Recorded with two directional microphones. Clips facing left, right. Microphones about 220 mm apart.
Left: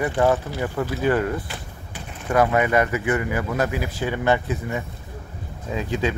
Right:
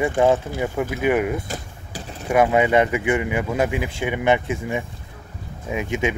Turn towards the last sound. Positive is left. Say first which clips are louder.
# right 1 dB
turn(degrees=-20)  # may be behind; listen again after turning